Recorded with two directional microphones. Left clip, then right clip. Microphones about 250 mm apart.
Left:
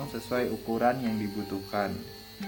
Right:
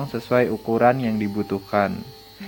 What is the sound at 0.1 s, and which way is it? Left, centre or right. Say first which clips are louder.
Speech: right 11 dB; right.